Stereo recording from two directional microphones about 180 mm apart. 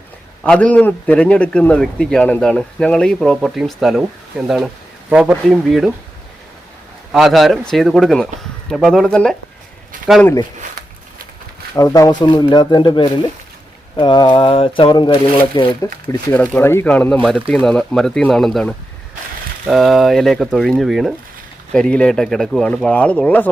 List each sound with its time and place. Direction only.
0.4 s a man's voice: 5° left (ahead or behind)
7.1 s a man's voice: centre (ahead or behind)
11.8 s speech: 20° left (ahead or behind)
16.3 s a man's voice: 10° left (ahead or behind)